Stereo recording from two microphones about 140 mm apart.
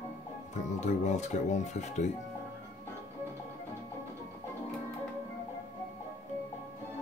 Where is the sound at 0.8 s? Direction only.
55° left (ahead or behind).